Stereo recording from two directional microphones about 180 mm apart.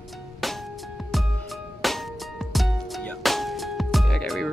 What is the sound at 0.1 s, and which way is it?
Music, centre (ahead or behind).